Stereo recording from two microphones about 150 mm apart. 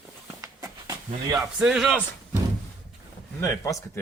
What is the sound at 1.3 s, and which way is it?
Speech, 5° right (ahead or behind).